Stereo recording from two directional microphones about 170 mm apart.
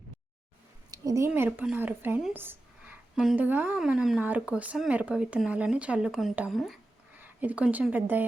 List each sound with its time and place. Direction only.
0.9 s a sound: 20° right (ahead or behind)
1.3 s speech: 10° right (ahead or behind)
7.1 s speech: 10° right (ahead or behind)